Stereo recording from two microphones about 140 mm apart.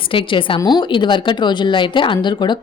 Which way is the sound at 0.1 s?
40° left (ahead or behind).